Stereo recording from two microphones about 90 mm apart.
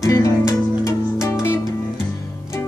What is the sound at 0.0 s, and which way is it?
Music, 35° left (ahead or behind).